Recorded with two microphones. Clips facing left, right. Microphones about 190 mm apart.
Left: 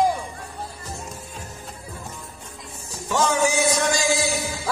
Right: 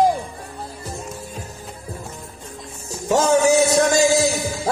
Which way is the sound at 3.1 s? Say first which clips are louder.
Right 6 dB; 40° right (ahead or behind).